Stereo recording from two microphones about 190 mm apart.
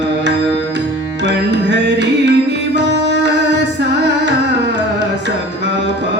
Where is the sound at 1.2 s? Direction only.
65° right (ahead or behind).